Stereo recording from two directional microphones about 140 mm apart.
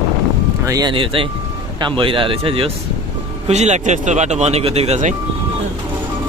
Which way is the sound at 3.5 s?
55° right (ahead or behind).